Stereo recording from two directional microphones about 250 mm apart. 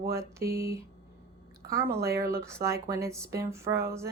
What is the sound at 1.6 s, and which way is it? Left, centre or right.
Speech, centre.